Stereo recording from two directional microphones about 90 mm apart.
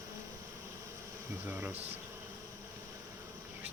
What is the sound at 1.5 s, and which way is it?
Speech, 20° right (ahead or behind).